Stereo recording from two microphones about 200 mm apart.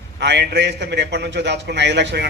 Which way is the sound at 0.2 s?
60° right (ahead or behind).